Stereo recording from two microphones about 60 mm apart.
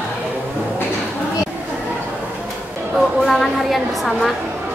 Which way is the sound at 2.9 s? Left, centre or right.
Centre.